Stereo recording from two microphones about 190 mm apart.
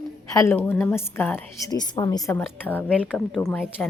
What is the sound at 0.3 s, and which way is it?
A woman's voice, 10° left (ahead or behind).